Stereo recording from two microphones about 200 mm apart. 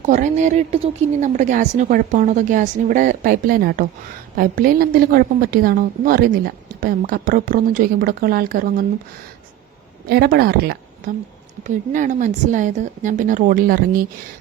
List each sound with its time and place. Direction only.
0.0 s a woman's voice: 40° right (ahead or behind)
10.1 s a woman's voice: 50° right (ahead or behind)
11.6 s a woman's voice: 40° right (ahead or behind)